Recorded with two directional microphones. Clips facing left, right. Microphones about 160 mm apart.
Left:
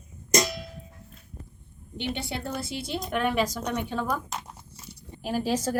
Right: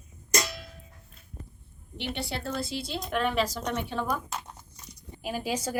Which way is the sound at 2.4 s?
20° left (ahead or behind).